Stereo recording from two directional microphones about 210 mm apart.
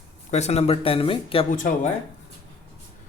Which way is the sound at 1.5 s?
40° left (ahead or behind).